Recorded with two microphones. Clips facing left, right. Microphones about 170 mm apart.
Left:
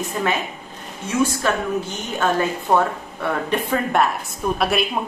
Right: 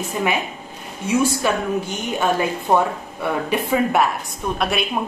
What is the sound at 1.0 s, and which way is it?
A woman's voice, 10° right (ahead or behind).